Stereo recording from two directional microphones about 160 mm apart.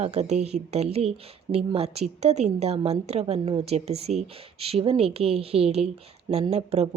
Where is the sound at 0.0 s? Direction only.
45° right (ahead or behind).